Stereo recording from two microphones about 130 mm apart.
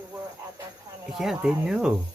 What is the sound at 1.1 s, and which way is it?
Speech, 5° right (ahead or behind).